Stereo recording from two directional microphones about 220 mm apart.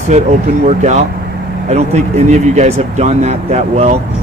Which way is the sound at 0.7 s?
30° right (ahead or behind).